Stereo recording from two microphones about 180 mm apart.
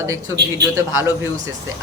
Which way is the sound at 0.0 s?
15° right (ahead or behind).